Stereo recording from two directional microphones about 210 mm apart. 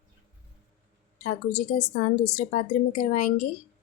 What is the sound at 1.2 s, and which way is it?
A woman's voice, 35° left (ahead or behind).